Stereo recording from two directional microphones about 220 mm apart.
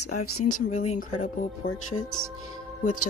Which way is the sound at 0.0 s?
90° left.